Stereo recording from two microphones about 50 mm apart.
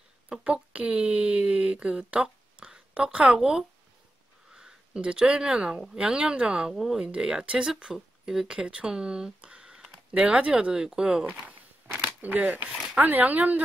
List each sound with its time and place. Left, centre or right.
0.3 s speech: right
6.7 s speech: centre
7.0 s speech: centre
9.4 s a sound: right
10.5 s speech: centre
12.2 s speech: right